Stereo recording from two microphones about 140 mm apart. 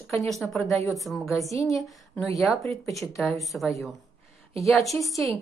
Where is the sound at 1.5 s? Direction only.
25° left (ahead or behind).